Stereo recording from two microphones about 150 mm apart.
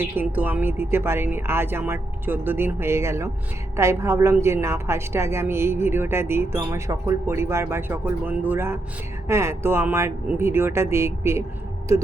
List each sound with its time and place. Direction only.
0.0 s a woman's voice: 10° right (ahead or behind)